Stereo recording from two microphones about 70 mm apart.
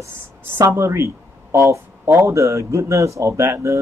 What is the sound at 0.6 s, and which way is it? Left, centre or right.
Speech, right.